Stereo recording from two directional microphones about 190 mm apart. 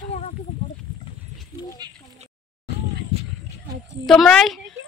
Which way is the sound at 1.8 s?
20° right (ahead or behind).